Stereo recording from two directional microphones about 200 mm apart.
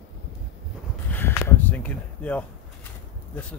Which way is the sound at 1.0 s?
10° left (ahead or behind).